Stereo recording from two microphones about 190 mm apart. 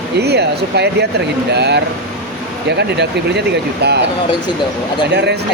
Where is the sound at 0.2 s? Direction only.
60° right (ahead or behind).